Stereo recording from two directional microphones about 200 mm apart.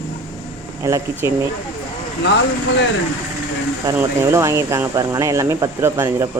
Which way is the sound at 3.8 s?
15° right (ahead or behind).